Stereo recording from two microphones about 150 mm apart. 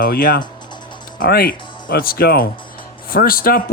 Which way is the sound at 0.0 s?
75° left (ahead or behind).